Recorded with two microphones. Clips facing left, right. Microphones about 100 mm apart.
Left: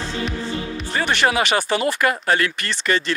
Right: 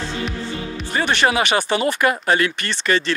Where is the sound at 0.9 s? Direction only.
20° right (ahead or behind).